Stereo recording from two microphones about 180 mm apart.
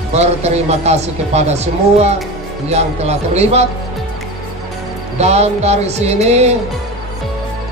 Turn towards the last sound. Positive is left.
turn(degrees=-35)  # may be behind; listen again after turning